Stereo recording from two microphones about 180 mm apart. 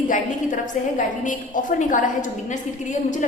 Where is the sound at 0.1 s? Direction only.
45° left (ahead or behind).